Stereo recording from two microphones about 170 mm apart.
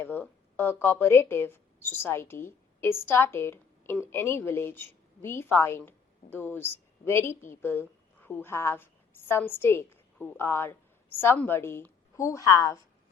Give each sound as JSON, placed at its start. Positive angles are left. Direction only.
{"t": 0.0, "sound": "a woman's voice", "side_deg": 10}